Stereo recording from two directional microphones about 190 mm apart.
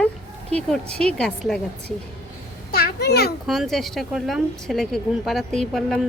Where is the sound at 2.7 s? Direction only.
55° left (ahead or behind).